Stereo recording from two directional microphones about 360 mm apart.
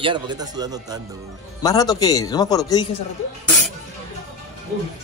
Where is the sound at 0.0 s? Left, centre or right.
Centre.